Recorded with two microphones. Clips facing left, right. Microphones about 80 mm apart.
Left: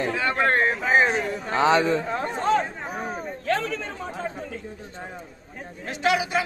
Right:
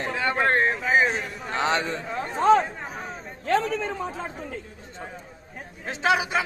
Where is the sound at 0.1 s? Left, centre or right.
Right.